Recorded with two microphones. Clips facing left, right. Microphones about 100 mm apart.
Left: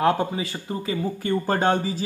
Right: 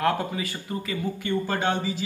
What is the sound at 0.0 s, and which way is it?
Speech, 25° left (ahead or behind).